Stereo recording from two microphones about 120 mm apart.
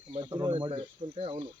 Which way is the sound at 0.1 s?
40° right (ahead or behind).